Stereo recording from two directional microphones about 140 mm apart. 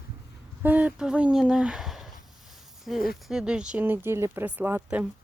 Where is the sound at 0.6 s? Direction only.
10° right (ahead or behind).